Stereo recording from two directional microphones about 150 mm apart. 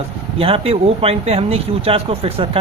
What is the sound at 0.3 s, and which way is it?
Speech, 40° right (ahead or behind).